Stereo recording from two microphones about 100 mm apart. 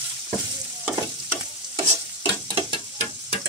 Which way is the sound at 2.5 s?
60° right (ahead or behind).